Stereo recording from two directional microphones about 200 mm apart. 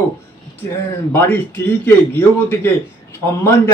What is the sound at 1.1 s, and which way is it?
Speech, 10° left (ahead or behind).